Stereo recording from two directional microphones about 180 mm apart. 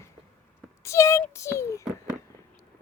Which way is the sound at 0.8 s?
15° left (ahead or behind).